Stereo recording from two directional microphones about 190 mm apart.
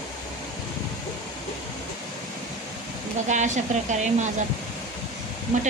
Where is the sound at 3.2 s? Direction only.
40° right (ahead or behind).